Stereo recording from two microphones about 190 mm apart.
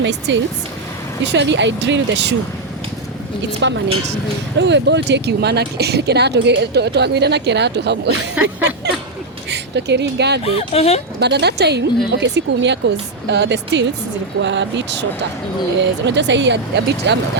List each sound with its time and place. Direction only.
0.0 s speech: 70° right (ahead or behind)
3.6 s speech: 70° right (ahead or behind)
8.4 s a sound: 10° right (ahead or behind)
9.5 s speech: 65° right (ahead or behind)
10.4 s speech: 30° left (ahead or behind)
11.2 s speech: 60° right (ahead or behind)